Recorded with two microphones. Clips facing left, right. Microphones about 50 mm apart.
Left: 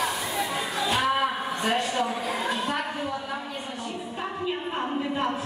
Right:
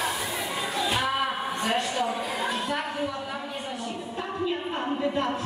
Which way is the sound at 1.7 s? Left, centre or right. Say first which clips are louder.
Left 2 dB; centre.